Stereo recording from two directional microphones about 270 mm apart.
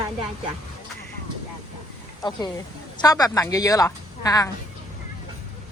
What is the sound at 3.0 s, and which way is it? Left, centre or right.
A woman's voice, centre.